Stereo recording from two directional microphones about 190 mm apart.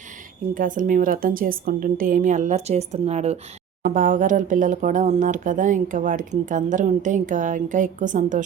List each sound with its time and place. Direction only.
0.5 s speech: 45° right (ahead or behind)